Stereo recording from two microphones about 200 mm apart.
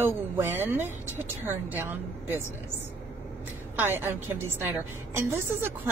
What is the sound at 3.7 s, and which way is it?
A woman's voice, 10° right (ahead or behind).